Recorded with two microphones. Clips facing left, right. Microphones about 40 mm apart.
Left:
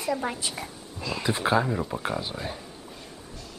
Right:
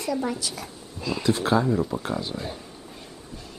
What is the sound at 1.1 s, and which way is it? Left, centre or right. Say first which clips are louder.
Speech: right 2 dB; centre.